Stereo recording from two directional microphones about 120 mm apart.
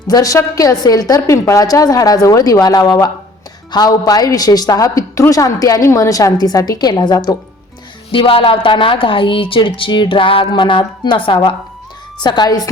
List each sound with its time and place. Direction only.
0.1 s a woman's voice: 30° left (ahead or behind)
8.1 s a woman's voice: 50° left (ahead or behind)